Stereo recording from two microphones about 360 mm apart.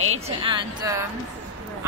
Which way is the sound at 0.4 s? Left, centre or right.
Centre.